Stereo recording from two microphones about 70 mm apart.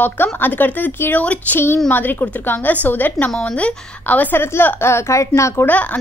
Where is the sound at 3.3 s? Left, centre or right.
Centre; by 5.6 s left.